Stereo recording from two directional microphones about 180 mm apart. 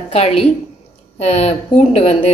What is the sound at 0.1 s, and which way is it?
A woman's voice, 35° left (ahead or behind).